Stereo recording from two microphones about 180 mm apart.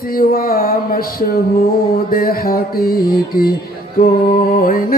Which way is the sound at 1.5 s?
55° left (ahead or behind).